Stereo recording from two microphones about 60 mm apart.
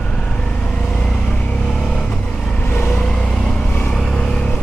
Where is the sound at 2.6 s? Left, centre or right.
Left.